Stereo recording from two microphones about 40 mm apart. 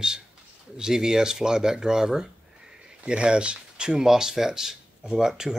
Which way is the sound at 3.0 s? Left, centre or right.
Right.